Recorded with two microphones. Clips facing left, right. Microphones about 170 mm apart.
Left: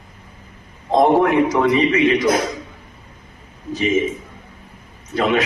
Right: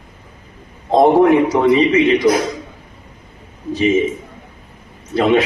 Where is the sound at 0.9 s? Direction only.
30° right (ahead or behind).